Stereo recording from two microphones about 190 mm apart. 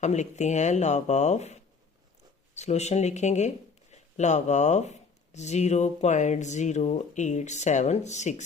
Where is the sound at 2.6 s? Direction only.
35° left (ahead or behind).